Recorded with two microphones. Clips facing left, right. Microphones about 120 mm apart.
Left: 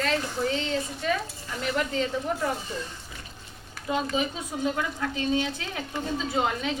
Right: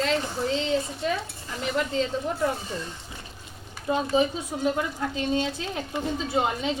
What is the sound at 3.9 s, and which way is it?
Speech, 25° right (ahead or behind).